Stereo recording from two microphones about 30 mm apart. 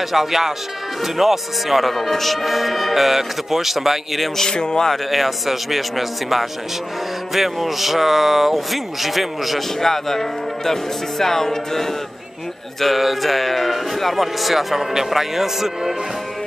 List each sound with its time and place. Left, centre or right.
0.1 s speech: centre
4.5 s speech: left
5.1 s speech: centre
9.8 s speech: centre
12.8 s speech: centre